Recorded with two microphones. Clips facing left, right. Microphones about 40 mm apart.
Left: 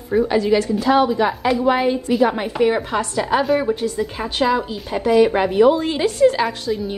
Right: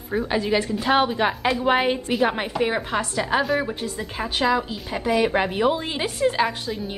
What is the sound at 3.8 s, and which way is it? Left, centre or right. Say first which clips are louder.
Speech: left 6 dB; centre.